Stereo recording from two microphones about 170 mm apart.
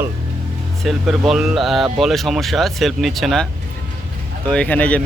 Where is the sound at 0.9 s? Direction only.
Centre (ahead or behind).